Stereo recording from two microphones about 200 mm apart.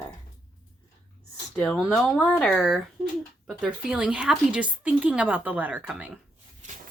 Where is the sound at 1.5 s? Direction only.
5° left (ahead or behind).